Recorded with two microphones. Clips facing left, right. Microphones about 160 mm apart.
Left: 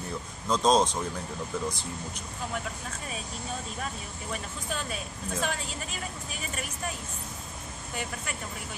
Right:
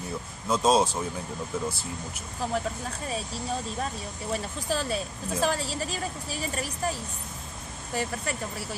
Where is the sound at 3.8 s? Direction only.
35° right (ahead or behind).